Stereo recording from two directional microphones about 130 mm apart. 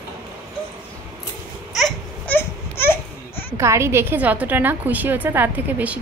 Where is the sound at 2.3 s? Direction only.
15° left (ahead or behind).